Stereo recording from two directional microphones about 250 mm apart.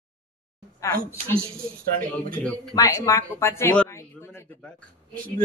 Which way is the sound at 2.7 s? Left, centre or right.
Centre.